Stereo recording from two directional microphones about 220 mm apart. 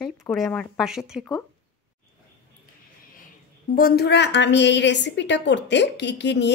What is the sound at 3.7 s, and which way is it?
A woman's voice, 45° left (ahead or behind).